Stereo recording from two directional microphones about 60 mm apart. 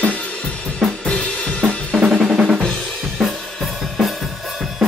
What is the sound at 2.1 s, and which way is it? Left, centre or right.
Drum, centre.